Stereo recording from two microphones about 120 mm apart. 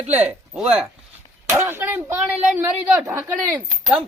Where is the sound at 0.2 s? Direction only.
10° right (ahead or behind).